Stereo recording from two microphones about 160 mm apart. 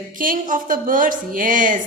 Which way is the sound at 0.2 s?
60° right (ahead or behind).